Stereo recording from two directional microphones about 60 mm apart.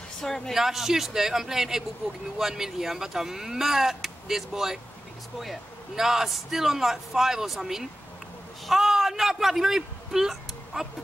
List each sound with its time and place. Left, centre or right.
0.2 s speech: centre
0.6 s a man's voice: centre